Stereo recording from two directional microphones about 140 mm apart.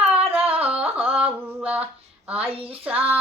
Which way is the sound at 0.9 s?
10° right (ahead or behind).